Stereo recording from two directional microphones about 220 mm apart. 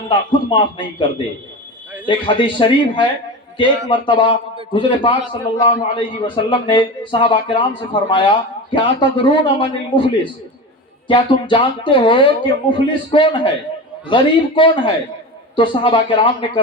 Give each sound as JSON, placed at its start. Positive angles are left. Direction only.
{"t": 0.1, "sound": "a man's voice", "side_deg": 20}
{"t": 2.0, "sound": "a man's voice", "side_deg": 20}
{"t": 11.1, "sound": "a man's voice", "side_deg": 20}